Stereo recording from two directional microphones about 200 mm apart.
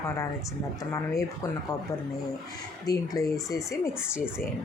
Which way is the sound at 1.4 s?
15° left (ahead or behind).